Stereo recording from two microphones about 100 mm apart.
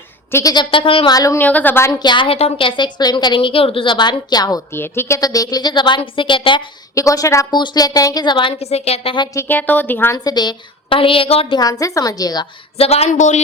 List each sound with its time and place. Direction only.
0.3 s a woman's voice: 25° left (ahead or behind)
0.5 s a woman's voice: 55° left (ahead or behind)
1.1 s a woman's voice: 35° left (ahead or behind)
1.4 s speech: 15° left (ahead or behind)
1.9 s a woman's voice: 45° left (ahead or behind); by 3.9 s 65° left (ahead or behind)
3.9 s a woman's voice: 45° left (ahead or behind)
4.7 s a woman's voice: 25° left (ahead or behind); by 6.7 s 55° left (ahead or behind)
6.9 s a woman's voice: 35° left (ahead or behind)
7.5 s a woman's voice: 45° left (ahead or behind)
8.5 s a woman's voice: 90° left
9.5 s speech: 20° left (ahead or behind)
10.2 s a woman's voice: 45° left (ahead or behind); by 11.5 s 70° left (ahead or behind)
11.5 s a woman's voice: 35° left (ahead or behind)
12.7 s a woman's voice: 90° left